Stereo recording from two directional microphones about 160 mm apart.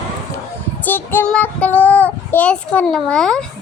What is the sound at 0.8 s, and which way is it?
Child singing, 10° left (ahead or behind).